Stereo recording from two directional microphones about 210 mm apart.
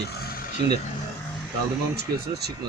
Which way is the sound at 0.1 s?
45° left (ahead or behind).